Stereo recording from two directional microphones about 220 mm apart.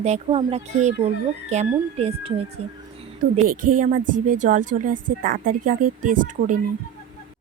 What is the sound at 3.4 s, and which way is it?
Speech, 40° right (ahead or behind).